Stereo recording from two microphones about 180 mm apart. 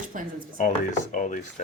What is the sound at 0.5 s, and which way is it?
Speech, 45° left (ahead or behind).